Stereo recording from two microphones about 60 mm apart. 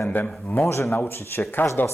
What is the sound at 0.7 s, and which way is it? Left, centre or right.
Speech, left.